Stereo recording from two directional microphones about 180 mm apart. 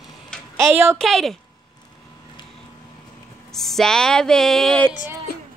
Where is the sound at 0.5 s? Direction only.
15° right (ahead or behind).